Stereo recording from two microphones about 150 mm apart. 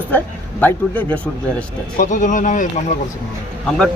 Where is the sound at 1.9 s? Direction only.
60° left (ahead or behind).